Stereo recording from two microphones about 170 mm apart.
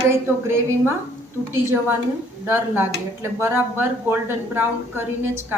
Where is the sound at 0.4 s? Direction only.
15° right (ahead or behind).